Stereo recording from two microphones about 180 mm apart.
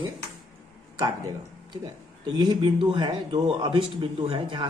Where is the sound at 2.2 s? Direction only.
25° right (ahead or behind).